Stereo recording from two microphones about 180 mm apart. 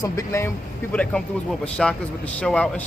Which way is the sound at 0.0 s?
15° left (ahead or behind).